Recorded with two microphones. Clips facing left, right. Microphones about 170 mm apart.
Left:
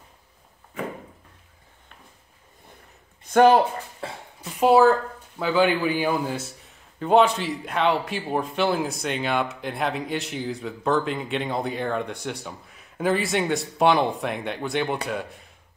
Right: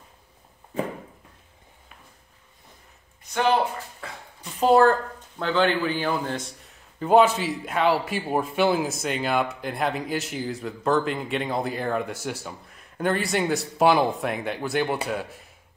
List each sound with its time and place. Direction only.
3.3 s speech: 45° left (ahead or behind)
4.0 s a sound: 30° left (ahead or behind)
4.4 s a man's voice: 5° left (ahead or behind)